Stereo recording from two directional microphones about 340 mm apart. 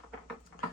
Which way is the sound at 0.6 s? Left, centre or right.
Left.